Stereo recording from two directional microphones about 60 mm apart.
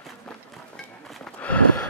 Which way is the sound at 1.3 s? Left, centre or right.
Left.